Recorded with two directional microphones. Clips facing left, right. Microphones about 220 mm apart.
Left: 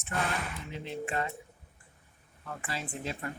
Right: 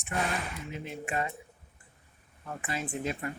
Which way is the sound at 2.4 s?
20° right (ahead or behind).